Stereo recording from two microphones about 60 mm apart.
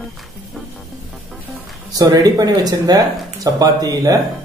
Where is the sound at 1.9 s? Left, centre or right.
Right.